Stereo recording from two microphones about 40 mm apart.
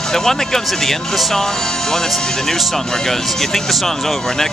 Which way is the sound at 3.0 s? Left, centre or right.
Centre.